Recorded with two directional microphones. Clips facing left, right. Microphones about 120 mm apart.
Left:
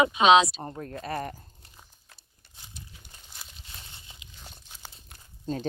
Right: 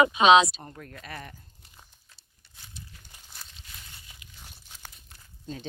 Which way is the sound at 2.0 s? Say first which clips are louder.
Left 4 dB; 50° left (ahead or behind).